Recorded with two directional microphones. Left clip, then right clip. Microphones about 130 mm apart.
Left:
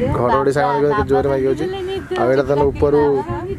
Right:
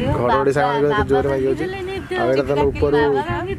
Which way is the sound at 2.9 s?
15° right (ahead or behind).